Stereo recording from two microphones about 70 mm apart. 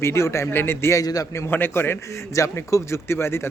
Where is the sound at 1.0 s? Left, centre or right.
Left.